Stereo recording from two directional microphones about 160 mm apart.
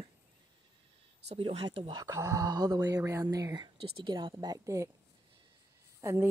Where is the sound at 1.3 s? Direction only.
40° right (ahead or behind); by 4.9 s 20° right (ahead or behind).